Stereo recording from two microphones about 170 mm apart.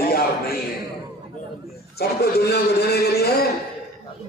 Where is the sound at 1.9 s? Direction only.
70° left (ahead or behind).